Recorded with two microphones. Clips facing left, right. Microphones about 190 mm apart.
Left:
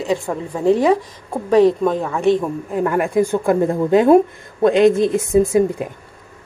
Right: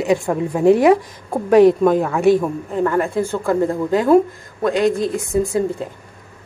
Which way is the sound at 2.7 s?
10° left (ahead or behind).